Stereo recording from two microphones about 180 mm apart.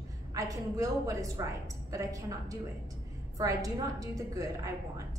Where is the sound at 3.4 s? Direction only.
20° right (ahead or behind).